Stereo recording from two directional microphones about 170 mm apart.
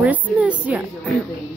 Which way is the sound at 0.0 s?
10° right (ahead or behind).